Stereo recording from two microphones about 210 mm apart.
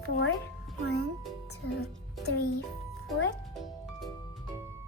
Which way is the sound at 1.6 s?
50° left (ahead or behind).